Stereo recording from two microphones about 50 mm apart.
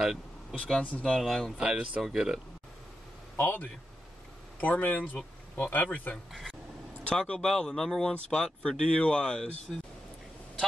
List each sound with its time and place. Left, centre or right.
0.0 s vehicle: centre
1.2 s speech: centre
1.6 s speech: centre
3.3 s a man's voice: left
7.1 s speech: centre
8.1 s speech: centre
9.7 s speech: centre